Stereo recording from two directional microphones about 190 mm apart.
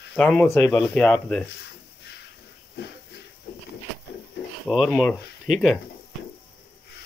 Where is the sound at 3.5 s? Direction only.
60° left (ahead or behind).